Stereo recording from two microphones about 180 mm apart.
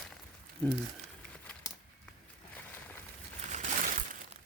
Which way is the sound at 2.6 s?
10° left (ahead or behind).